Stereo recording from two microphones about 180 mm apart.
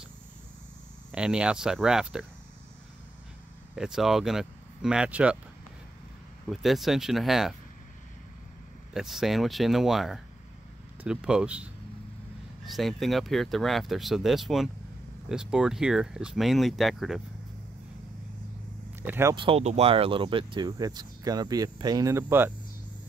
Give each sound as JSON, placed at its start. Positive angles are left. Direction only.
{"t": 1.1, "sound": "speech", "side_deg": -5}
{"t": 3.7, "sound": "speech", "side_deg": -5}
{"t": 6.4, "sound": "speech", "side_deg": 0}
{"t": 8.9, "sound": "speech", "side_deg": 0}
{"t": 19.0, "sound": "speech", "side_deg": -15}
{"t": 19.3, "sound": "speech", "side_deg": -30}